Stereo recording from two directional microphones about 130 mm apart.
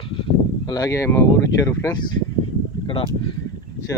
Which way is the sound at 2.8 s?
40° left (ahead or behind).